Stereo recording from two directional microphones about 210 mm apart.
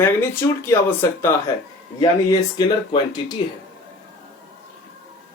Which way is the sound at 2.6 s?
20° left (ahead or behind).